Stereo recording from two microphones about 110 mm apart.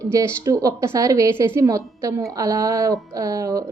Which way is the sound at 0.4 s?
30° right (ahead or behind).